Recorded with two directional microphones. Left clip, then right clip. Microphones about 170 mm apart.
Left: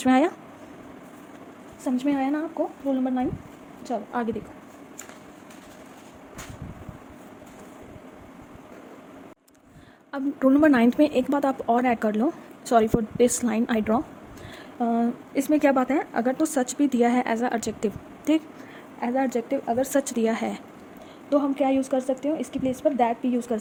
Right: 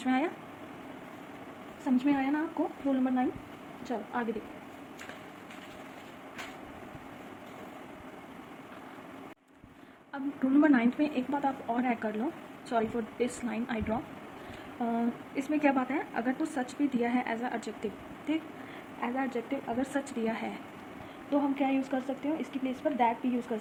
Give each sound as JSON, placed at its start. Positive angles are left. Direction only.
{"t": 0.0, "sound": "a woman's voice", "side_deg": 90}
{"t": 1.8, "sound": "a woman's voice", "side_deg": 60}
{"t": 3.8, "sound": "a woman's voice", "side_deg": 65}
{"t": 10.1, "sound": "a woman's voice", "side_deg": 85}
{"t": 21.2, "sound": "a woman's voice", "side_deg": 70}